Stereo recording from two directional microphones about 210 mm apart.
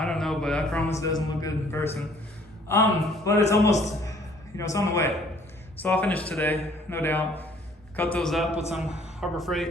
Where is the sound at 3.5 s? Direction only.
15° left (ahead or behind).